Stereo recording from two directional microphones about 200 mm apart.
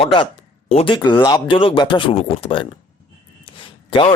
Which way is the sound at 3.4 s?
25° left (ahead or behind).